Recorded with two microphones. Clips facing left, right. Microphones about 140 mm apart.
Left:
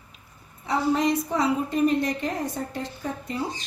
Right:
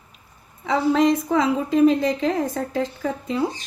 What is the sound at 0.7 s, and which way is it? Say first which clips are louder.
Speech: right 5 dB; 90° right.